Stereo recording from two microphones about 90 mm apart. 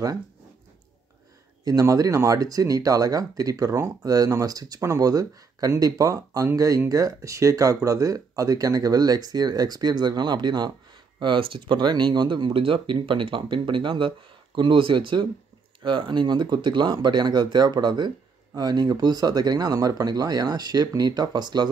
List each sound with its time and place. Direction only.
1.6 s speech: 40° right (ahead or behind)
11.1 s speech: 70° right (ahead or behind); by 21.6 s 55° right (ahead or behind)